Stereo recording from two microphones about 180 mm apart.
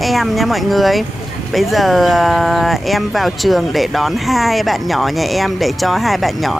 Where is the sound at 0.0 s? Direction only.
Centre (ahead or behind).